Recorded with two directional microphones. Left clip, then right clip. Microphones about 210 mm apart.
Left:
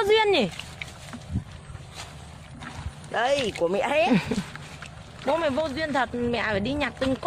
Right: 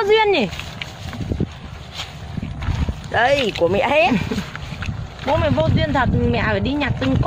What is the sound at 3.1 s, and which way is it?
Speech, 5° left (ahead or behind).